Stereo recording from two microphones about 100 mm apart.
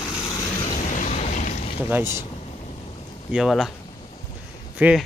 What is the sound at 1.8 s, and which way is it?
Speech, 25° right (ahead or behind).